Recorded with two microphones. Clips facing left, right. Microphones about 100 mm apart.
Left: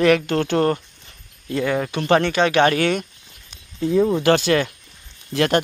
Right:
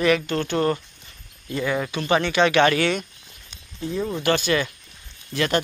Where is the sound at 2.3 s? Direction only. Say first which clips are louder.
Left 1 dB; 40° left (ahead or behind).